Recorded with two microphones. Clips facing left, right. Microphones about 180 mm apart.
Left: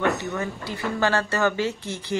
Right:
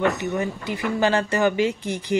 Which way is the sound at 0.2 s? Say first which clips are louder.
Right 4 dB; 15° right (ahead or behind).